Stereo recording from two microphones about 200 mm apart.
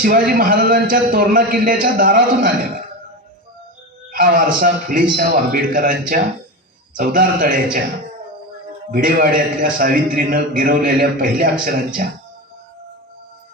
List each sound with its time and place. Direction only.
0.0 s a man's voice: 45° right (ahead or behind)
4.1 s a man's voice: 45° right (ahead or behind)
8.9 s a man's voice: 45° right (ahead or behind)